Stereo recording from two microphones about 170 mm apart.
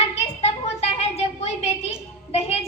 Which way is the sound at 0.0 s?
40° left (ahead or behind).